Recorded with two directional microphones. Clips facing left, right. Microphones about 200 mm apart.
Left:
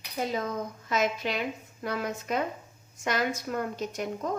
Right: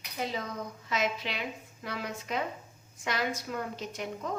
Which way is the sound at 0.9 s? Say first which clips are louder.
Left 4 dB; 45° left (ahead or behind).